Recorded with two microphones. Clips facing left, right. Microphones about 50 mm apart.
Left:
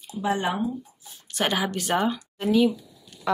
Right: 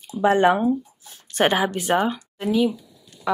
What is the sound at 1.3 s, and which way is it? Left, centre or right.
Speech, right.